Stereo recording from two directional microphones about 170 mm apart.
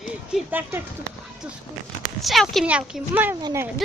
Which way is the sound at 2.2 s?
Centre (ahead or behind).